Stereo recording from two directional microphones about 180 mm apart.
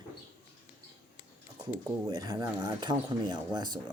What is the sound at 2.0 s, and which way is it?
Speech, 20° right (ahead or behind).